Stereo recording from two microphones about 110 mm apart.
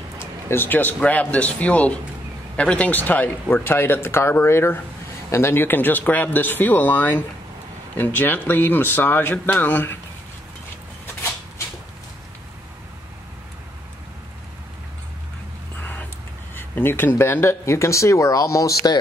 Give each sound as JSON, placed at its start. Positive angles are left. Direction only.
{"t": 0.5, "sound": "speech", "side_deg": 20}
{"t": 16.5, "sound": "speech", "side_deg": 20}